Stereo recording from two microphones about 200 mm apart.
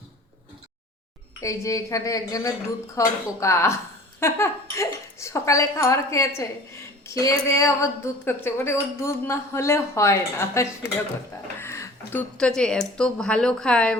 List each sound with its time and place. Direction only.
1.4 s a woman's voice: 15° left (ahead or behind)
11.6 s a sound: 10° left (ahead or behind)
13.0 s speech: 5° left (ahead or behind)